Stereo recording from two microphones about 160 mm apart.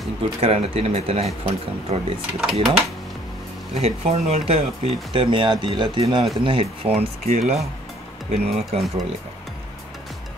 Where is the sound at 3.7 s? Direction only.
40° right (ahead or behind).